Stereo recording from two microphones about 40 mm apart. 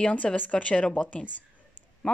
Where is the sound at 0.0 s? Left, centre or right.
Left.